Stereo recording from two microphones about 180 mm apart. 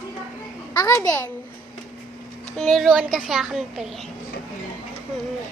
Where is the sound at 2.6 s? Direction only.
Centre (ahead or behind).